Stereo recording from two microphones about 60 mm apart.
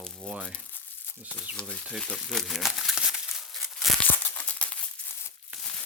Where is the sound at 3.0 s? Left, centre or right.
Centre.